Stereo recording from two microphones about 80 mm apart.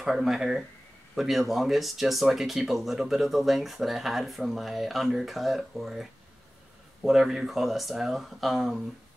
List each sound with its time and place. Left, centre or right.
0.0 s speech: centre